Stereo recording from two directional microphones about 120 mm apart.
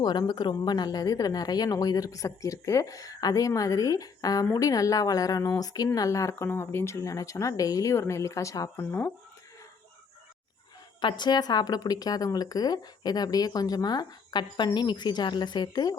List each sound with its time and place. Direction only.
0.0 s a woman's voice: 35° left (ahead or behind)
11.0 s a woman's voice: 35° left (ahead or behind)